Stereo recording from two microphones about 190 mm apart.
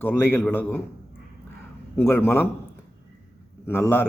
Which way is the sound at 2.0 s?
10° left (ahead or behind).